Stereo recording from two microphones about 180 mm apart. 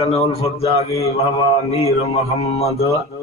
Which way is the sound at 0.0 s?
35° left (ahead or behind).